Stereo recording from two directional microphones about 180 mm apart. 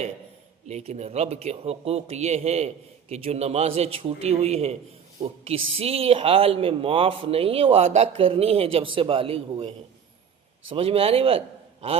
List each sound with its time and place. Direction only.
0.7 s a man's voice: 35° right (ahead or behind)